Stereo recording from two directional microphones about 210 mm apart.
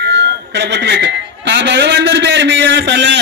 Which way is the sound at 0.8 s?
55° right (ahead or behind).